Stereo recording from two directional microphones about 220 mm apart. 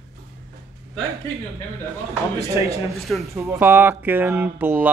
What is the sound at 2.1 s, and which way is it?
Speech, 15° right (ahead or behind).